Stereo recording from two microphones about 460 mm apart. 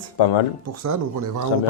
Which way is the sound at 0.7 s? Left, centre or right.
Right.